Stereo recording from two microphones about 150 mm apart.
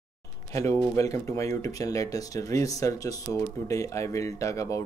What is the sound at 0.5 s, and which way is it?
Speech, 20° left (ahead or behind).